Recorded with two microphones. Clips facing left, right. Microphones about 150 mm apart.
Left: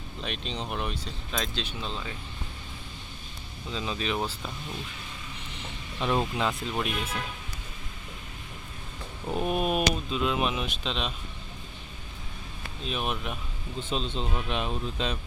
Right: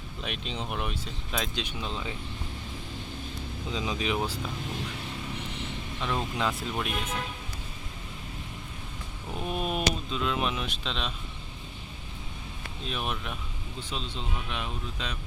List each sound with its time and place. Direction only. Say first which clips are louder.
0.2 s speech: left 1 dB; 5° right (ahead or behind)
3.7 s speech: right 1 dB; 15° right (ahead or behind)
6.0 s speech: left 5 dB; 20° left (ahead or behind)
6.3 s speech: left 1 dB; centre (ahead or behind)
9.3 s a sound: left 4 dB; 15° left (ahead or behind)
9.9 s speech: left 2 dB; 10° left (ahead or behind)
12.8 s speech: left 2 dB; 5° left (ahead or behind)
13.7 s speech: left 6 dB; 20° left (ahead or behind)